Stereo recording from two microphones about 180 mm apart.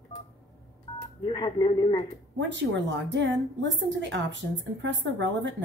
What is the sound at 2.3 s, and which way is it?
A woman's voice, 80° right.